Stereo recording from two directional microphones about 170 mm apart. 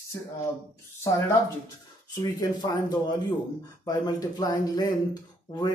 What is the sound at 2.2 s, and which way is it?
Speech, 25° left (ahead or behind).